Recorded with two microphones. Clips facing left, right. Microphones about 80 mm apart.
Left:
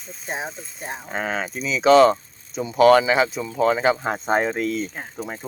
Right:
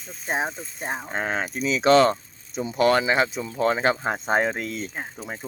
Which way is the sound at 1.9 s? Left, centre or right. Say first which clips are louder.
Left 4 dB; centre.